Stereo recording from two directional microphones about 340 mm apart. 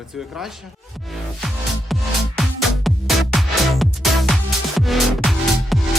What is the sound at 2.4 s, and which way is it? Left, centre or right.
Music, centre.